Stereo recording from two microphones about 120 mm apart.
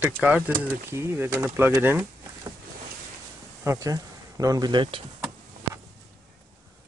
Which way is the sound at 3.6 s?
25° right (ahead or behind).